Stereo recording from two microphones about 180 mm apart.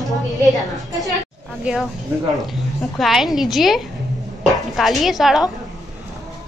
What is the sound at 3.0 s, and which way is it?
A woman's voice, centre (ahead or behind).